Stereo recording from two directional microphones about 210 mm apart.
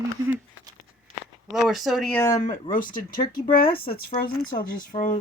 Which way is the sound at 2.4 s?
40° left (ahead or behind).